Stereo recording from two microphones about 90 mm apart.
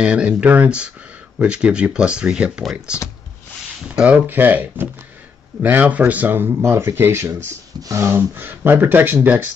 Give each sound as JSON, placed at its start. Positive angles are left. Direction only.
{"t": 0.0, "sound": "speech", "side_deg": -15}
{"t": 2.6, "sound": "speech", "side_deg": 0}
{"t": 3.9, "sound": "speech", "side_deg": -15}
{"t": 8.1, "sound": "speech", "side_deg": -25}